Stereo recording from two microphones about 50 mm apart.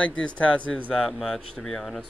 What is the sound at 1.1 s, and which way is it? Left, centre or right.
Speech, centre.